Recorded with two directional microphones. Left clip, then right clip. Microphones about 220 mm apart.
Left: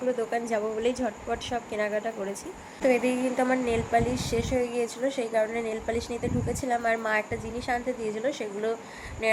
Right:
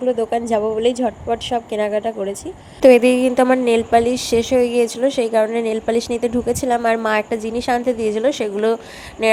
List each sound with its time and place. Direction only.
0.2 s a woman's voice: 30° right (ahead or behind)
2.8 s a woman's voice: 50° right (ahead or behind)